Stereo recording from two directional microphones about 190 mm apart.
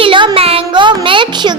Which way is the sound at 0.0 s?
25° right (ahead or behind).